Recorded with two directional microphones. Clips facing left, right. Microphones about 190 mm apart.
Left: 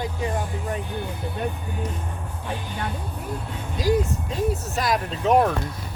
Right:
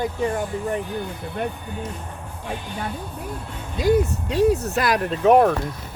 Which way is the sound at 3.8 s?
70° right (ahead or behind).